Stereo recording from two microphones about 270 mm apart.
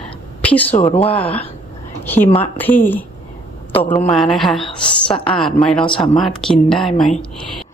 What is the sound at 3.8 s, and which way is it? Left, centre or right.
Speech, centre.